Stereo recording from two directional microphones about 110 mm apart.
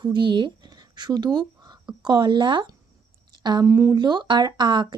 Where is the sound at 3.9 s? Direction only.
40° right (ahead or behind).